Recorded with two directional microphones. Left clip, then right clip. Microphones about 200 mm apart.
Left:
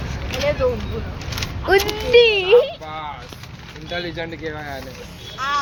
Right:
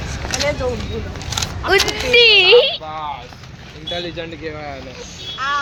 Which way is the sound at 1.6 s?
20° left (ahead or behind).